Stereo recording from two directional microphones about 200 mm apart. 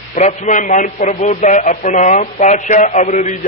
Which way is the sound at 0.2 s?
35° left (ahead or behind).